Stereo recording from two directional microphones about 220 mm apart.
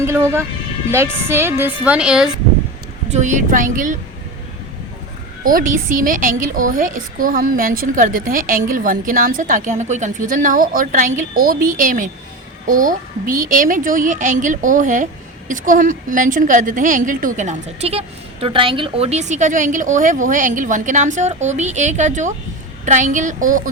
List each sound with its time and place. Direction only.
0.0 s a woman's voice: 10° right (ahead or behind)
3.1 s a woman's voice: 35° right (ahead or behind)
5.4 s a woman's voice: 40° right (ahead or behind)